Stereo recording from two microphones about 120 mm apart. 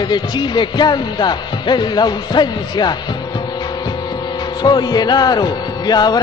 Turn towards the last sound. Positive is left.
turn(degrees=35)  # may be behind; listen again after turning